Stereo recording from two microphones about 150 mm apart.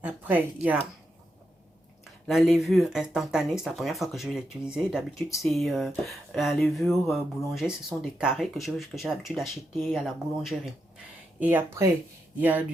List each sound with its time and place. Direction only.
0.0 s speech: 10° right (ahead or behind)
2.2 s speech: centre (ahead or behind)